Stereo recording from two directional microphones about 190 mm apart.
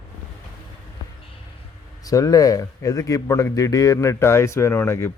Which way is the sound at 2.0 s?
20° left (ahead or behind).